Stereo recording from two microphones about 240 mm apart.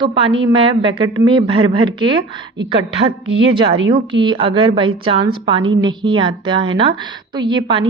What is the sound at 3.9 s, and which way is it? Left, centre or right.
A woman's voice, centre.